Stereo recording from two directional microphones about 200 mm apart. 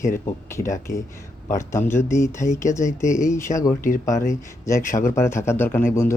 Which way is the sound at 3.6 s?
40° left (ahead or behind).